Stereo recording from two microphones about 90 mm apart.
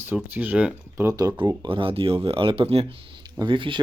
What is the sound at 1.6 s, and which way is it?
Speech, 75° right (ahead or behind).